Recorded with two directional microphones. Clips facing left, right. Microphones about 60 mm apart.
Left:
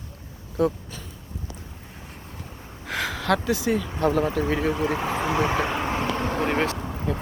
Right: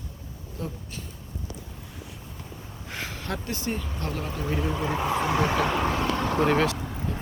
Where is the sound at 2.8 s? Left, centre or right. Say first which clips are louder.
Left 9 dB; left.